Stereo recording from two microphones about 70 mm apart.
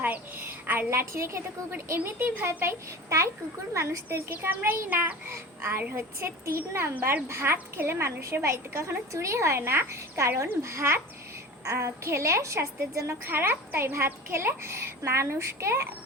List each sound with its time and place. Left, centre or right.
0.0 s a child's voice: right
0.9 s a woman's voice: right
2.0 s a child's voice: right
3.1 s a woman's voice: right
4.3 s a child's voice: right
13.2 s a woman's voice: right